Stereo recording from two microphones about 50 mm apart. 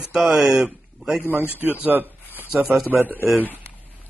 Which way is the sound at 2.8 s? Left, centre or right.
Right.